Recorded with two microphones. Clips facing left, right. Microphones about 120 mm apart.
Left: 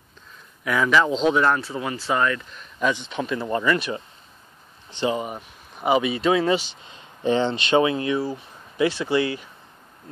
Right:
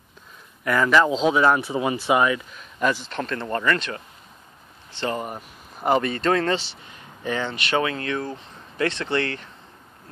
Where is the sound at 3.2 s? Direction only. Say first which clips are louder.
Left 3 dB; 10° left (ahead or behind).